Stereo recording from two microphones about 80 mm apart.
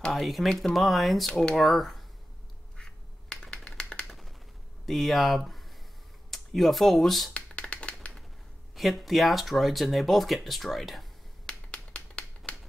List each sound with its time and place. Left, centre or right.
0.0 s speech: centre
2.8 s duck: centre
4.8 s speech: centre
7.3 s finger snapping: centre
8.7 s speech: centre
11.7 s a sound: centre